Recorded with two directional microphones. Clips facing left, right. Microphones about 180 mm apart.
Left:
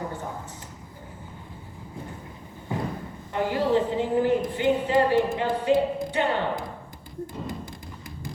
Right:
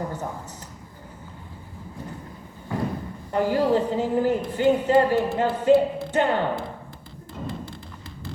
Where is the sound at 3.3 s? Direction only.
40° right (ahead or behind).